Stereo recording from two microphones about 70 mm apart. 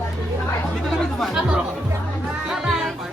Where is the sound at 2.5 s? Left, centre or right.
Centre.